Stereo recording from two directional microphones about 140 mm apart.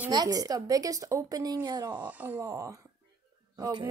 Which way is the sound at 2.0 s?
10° right (ahead or behind).